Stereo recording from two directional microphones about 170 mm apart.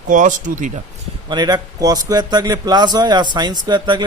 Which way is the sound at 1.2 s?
25° right (ahead or behind).